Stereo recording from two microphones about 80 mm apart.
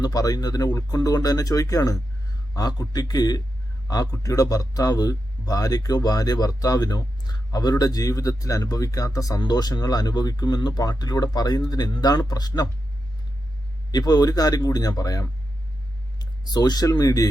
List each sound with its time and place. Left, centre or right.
0.0 s speech: left
9.4 s speech: left
13.9 s speech: left
16.1 s speech: left